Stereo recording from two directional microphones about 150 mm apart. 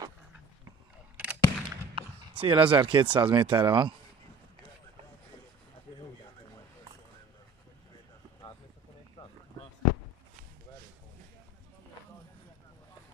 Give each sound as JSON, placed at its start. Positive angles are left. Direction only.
{"t": 1.1, "sound": "gunshot", "side_deg": -10}
{"t": 2.0, "sound": "a sound", "side_deg": -35}
{"t": 3.2, "sound": "speech", "side_deg": -35}